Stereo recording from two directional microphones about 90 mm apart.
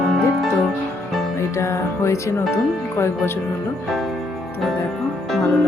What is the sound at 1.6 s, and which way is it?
Speech, 30° left (ahead or behind).